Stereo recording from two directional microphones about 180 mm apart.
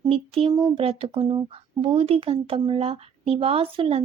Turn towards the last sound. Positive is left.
turn(degrees=-30)  # may be behind; listen again after turning